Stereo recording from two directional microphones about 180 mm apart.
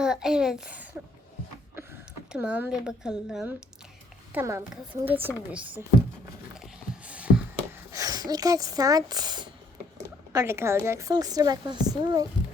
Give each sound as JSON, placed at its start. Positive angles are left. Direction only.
{"t": 0.0, "sound": "a woman's voice", "side_deg": -5}
{"t": 2.3, "sound": "a woman's voice", "side_deg": -5}
{"t": 4.4, "sound": "speech", "side_deg": -15}
{"t": 6.6, "sound": "a sound", "side_deg": -5}
{"t": 7.9, "sound": "speech", "side_deg": -20}